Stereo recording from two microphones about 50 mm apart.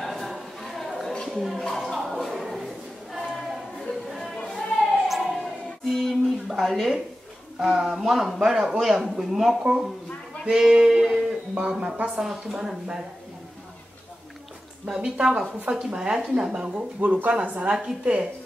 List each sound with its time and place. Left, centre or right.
0.0 s a sound: centre
1.3 s speech: centre
1.6 s choir: centre
4.5 s a sound: centre
5.0 s siren: centre
5.4 s music: centre
6.6 s a man's voice: centre
10.5 s music: centre
11.6 s a woman's voice: centre
14.9 s a woman's voice: centre
17.7 s a woman's voice: centre